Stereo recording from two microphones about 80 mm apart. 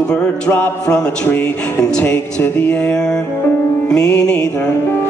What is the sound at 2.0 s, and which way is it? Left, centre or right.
A man's voice, left.